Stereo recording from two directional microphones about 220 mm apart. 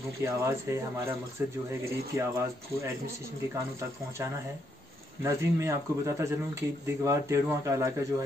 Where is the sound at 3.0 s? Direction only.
10° right (ahead or behind).